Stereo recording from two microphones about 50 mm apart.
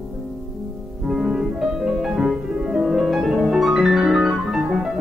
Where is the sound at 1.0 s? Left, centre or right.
Centre.